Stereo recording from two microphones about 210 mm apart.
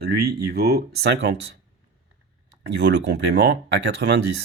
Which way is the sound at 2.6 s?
55° right (ahead or behind).